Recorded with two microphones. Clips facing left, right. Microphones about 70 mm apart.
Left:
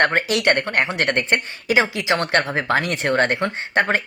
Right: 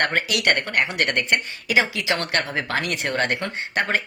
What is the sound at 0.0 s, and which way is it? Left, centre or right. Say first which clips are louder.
Speech: left 4 dB; left.